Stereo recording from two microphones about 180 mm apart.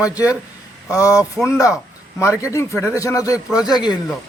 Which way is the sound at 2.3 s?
10° right (ahead or behind).